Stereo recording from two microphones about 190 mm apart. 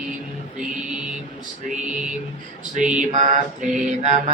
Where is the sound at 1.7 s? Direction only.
5° right (ahead or behind).